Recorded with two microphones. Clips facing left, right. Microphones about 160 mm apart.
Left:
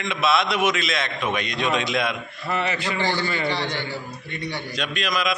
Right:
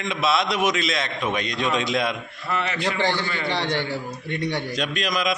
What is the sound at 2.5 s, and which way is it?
Speech, 5° left (ahead or behind).